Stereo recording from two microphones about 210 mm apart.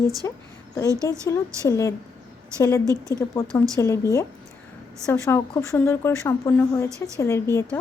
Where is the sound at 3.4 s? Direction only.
10° left (ahead or behind).